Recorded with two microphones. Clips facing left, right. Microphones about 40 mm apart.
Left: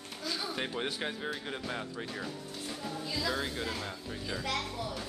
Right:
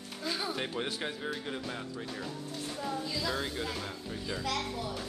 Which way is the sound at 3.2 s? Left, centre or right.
Centre.